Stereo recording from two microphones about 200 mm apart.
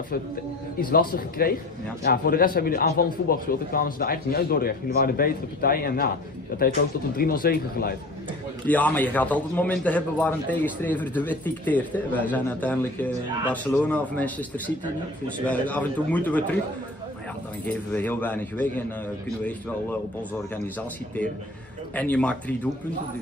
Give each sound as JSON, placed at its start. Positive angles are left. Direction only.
{"t": 0.7, "sound": "a man's voice", "side_deg": 45}
{"t": 8.6, "sound": "a man's voice", "side_deg": 10}
{"t": 15.4, "sound": "a man's voice", "side_deg": 5}
{"t": 17.6, "sound": "a man's voice", "side_deg": 10}
{"t": 21.9, "sound": "a man's voice", "side_deg": 5}